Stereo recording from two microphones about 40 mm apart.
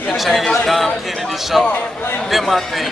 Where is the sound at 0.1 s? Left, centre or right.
Centre.